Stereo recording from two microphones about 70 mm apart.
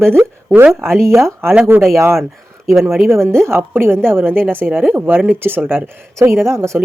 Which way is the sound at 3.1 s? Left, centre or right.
Right.